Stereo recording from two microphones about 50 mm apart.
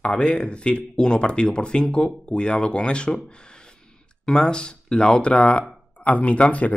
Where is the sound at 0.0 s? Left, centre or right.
Left.